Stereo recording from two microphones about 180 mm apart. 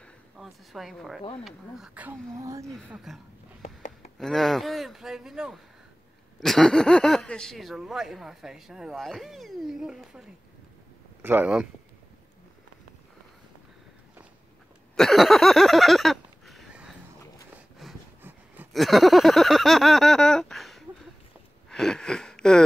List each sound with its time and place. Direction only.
0.4 s speech: centre (ahead or behind); by 2.7 s 20° right (ahead or behind)
2.7 s speech: centre (ahead or behind)
3.6 s a sound: 50° left (ahead or behind)
4.2 s speech: centre (ahead or behind)
11.2 s speech: 10° right (ahead or behind)
15.0 s a sound: centre (ahead or behind)